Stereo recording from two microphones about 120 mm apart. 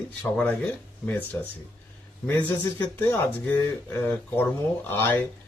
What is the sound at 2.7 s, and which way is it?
Speech, 15° left (ahead or behind).